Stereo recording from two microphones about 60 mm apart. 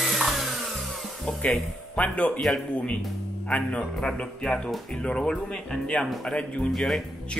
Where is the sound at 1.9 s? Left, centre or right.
Left.